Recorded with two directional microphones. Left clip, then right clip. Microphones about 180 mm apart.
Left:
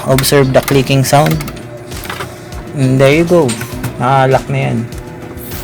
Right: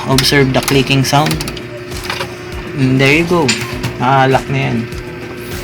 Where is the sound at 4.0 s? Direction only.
60° left (ahead or behind).